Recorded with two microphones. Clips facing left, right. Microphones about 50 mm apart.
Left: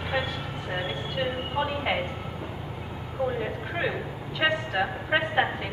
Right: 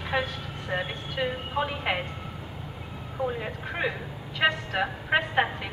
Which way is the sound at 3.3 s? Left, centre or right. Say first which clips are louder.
Left 2 dB; centre.